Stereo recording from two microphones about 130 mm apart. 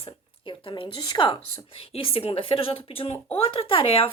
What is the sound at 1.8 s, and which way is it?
Speech, 45° left (ahead or behind).